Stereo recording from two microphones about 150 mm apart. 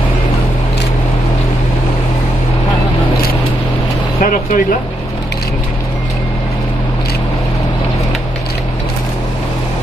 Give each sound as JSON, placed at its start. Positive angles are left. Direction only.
{"t": 4.2, "sound": "vehicle", "side_deg": 60}